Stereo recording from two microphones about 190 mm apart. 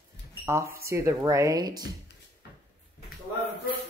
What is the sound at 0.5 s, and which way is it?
Speech, 15° right (ahead or behind).